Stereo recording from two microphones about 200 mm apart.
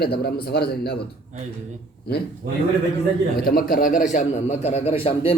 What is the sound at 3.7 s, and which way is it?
A man's voice, 40° left (ahead or behind).